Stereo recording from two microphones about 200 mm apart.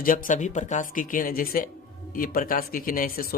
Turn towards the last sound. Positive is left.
turn(degrees=45)  # may be behind; listen again after turning